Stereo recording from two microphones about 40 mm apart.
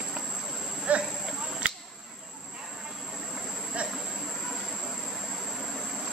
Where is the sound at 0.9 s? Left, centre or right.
Right.